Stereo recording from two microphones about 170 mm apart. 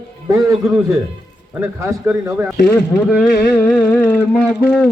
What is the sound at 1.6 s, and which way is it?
Speech, 15° right (ahead or behind).